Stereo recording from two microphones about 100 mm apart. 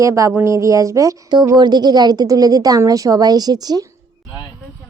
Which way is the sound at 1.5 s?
45° right (ahead or behind).